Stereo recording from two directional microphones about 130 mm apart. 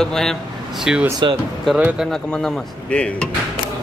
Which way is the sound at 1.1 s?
35° right (ahead or behind).